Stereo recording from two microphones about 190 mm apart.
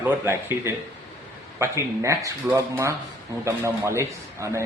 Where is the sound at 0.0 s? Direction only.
15° right (ahead or behind).